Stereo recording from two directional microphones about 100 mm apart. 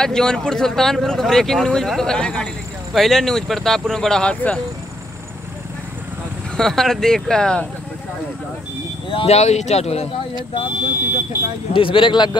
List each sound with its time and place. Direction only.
0.0 s speech: 5° left (ahead or behind)
6.5 s speech: 5° left (ahead or behind)
9.1 s speech: 80° left
10.3 s speech: 55° left (ahead or behind)
11.7 s speech: 60° left (ahead or behind)